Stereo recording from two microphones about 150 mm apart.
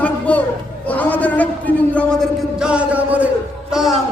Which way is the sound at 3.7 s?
Centre (ahead or behind).